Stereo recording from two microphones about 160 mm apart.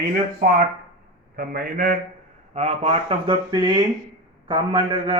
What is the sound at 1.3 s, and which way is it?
Speech, 65° right (ahead or behind).